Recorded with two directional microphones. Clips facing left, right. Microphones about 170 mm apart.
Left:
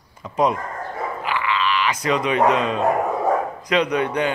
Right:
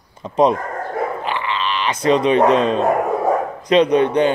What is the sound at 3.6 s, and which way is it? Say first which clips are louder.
Speech: right 7 dB; 25° right (ahead or behind).